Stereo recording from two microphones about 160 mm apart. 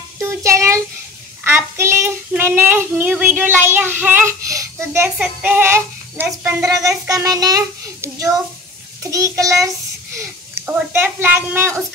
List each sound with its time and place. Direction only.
0.2 s child singing: 20° right (ahead or behind)
5.2 s a child's voice: 10° right (ahead or behind)